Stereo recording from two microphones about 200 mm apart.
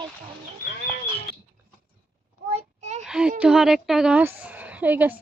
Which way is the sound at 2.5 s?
35° right (ahead or behind).